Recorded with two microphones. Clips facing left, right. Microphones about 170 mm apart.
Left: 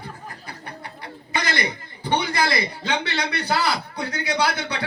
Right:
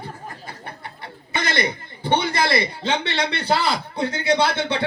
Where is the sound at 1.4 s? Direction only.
25° right (ahead or behind).